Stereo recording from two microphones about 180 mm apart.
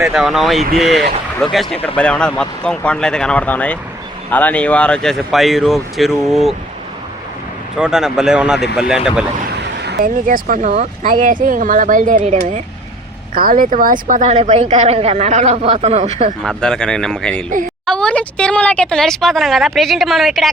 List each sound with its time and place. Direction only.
0.0 s speech: centre (ahead or behind)
7.8 s speech: 5° right (ahead or behind)
9.6 s speech: 65° right (ahead or behind); by 12.6 s 40° right (ahead or behind)
13.3 s speech: 50° right (ahead or behind)
16.4 s speech: 5° left (ahead or behind)